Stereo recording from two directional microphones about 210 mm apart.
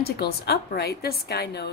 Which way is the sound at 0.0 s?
50° left (ahead or behind).